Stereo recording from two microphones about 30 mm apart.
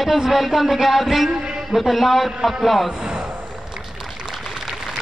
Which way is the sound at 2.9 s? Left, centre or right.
Right.